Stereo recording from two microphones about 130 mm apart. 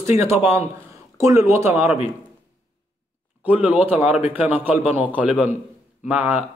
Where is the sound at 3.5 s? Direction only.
10° right (ahead or behind).